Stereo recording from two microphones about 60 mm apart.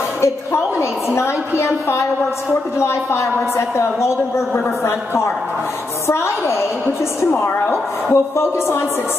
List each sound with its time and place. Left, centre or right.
0.2 s a woman's voice: left
7.2 s a woman's voice: left
8.1 s a woman's voice: left